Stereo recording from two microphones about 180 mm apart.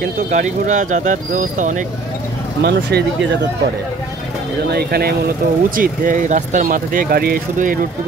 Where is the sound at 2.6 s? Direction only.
65° right (ahead or behind).